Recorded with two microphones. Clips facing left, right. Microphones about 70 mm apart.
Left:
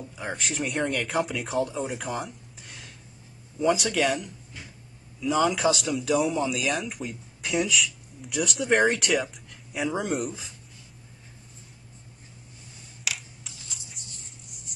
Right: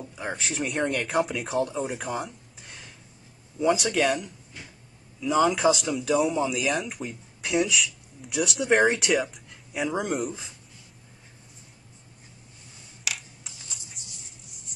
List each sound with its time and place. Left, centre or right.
0.1 s speech: centre
13.0 s computer keyboard: centre
14.0 s a sound: centre